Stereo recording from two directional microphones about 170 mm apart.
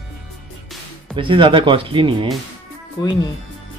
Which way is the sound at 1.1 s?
30° right (ahead or behind).